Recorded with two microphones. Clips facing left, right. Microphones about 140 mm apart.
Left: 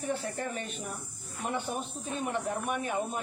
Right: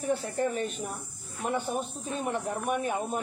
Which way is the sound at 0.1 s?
40° right (ahead or behind).